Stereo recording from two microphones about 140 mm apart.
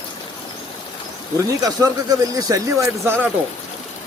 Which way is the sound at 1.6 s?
25° right (ahead or behind).